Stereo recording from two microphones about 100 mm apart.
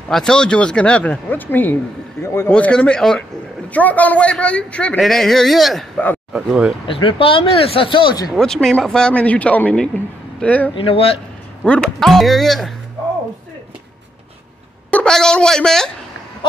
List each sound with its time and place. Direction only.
0.1 s a man's voice: 5° left (ahead or behind); by 2.5 s 25° left (ahead or behind)
2.5 s speech: 10° left (ahead or behind); by 6.7 s 10° right (ahead or behind)
6.9 s speech: 60° left (ahead or behind)
8.4 s speech: 5° left (ahead or behind)
10.7 s speech: 65° left (ahead or behind)
11.6 s speech: 5° left (ahead or behind)
14.9 s a woman's voice: 10° left (ahead or behind)